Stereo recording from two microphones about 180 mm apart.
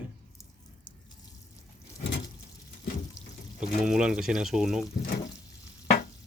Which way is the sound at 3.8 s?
5° right (ahead or behind).